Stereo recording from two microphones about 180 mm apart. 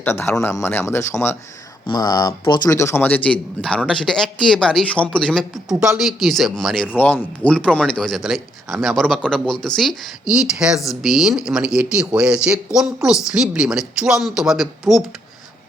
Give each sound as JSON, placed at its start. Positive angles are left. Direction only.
{"t": 0.0, "sound": "a man's voice", "side_deg": 10}